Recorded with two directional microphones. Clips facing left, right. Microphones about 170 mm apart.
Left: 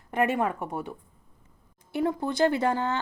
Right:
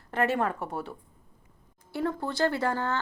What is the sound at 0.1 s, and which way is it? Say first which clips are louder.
Speech: left 1 dB; 15° left (ahead or behind).